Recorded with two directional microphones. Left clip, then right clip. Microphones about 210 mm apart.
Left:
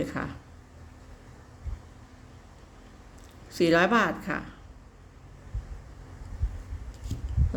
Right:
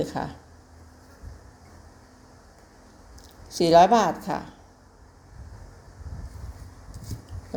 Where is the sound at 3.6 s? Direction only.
Centre (ahead or behind).